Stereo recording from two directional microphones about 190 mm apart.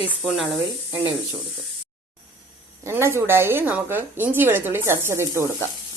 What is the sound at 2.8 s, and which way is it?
A woman's voice, 15° right (ahead or behind).